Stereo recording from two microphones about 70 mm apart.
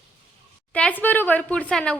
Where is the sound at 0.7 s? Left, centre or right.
Left.